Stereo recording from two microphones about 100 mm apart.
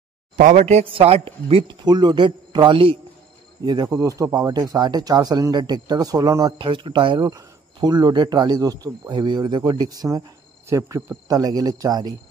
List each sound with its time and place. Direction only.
0.7 s speech: 75° right (ahead or behind); by 3.0 s 60° right (ahead or behind)
3.8 s speech: 35° right (ahead or behind)
6.6 s speech: 55° right (ahead or behind)
7.2 s speech: 40° right (ahead or behind)